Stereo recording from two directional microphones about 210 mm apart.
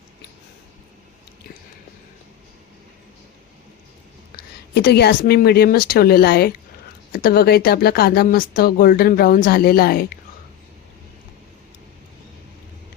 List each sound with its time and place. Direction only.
4.7 s speech: 50° left (ahead or behind)